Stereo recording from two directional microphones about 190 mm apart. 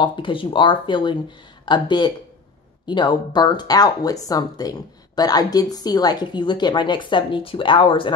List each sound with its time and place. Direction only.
0.0 s speech: 25° left (ahead or behind)